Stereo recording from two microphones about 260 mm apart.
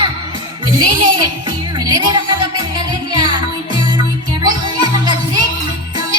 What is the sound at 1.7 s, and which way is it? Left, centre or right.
Music, centre.